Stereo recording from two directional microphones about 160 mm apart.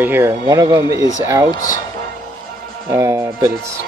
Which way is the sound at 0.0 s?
15° right (ahead or behind).